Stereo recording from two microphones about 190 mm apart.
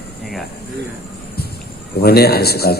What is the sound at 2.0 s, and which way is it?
Speech, 55° left (ahead or behind).